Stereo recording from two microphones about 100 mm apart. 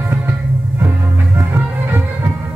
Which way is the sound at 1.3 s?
20° right (ahead or behind).